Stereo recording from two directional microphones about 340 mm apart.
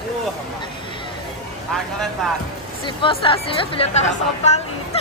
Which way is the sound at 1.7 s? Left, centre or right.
Centre.